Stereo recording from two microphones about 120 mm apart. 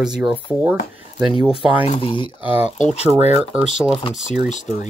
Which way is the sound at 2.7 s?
75° left (ahead or behind).